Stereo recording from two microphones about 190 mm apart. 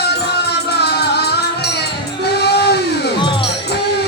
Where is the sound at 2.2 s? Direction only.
60° left (ahead or behind).